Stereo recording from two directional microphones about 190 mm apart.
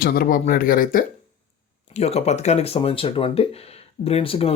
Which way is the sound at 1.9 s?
35° left (ahead or behind).